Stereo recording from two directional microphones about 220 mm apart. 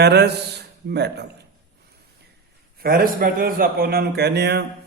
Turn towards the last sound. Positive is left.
turn(degrees=-50)  # may be behind; listen again after turning